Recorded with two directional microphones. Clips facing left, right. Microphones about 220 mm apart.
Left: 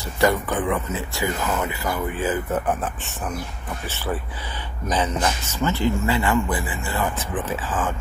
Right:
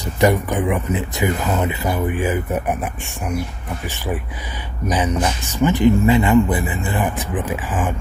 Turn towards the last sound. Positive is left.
turn(degrees=-15)  # may be behind; listen again after turning